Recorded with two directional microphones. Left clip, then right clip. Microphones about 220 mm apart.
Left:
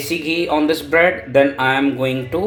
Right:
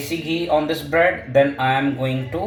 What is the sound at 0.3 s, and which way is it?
Speech, 45° left (ahead or behind).